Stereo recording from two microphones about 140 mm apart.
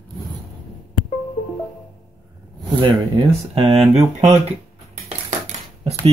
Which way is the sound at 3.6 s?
45° right (ahead or behind).